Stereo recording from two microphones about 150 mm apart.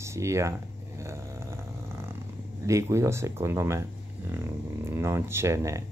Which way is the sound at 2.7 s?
20° right (ahead or behind).